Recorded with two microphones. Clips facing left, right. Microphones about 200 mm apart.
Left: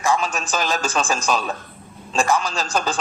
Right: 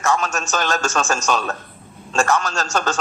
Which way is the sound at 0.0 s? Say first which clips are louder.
Even; 10° left (ahead or behind).